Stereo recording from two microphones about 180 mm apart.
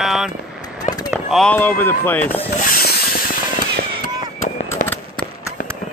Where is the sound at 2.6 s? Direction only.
55° left (ahead or behind).